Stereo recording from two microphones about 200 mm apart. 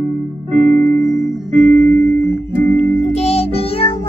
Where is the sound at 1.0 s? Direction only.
40° right (ahead or behind).